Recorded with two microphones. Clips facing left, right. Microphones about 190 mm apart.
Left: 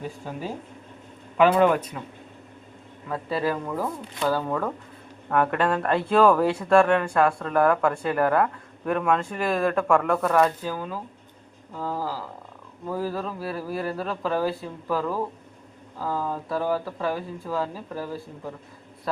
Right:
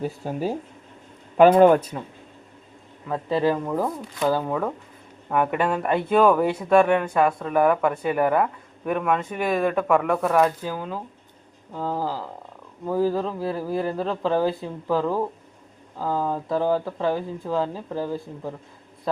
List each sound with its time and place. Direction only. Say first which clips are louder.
1.4 s speech: right 5 dB; 40° right (ahead or behind)
3.1 s speech: right 4 dB; 20° right (ahead or behind)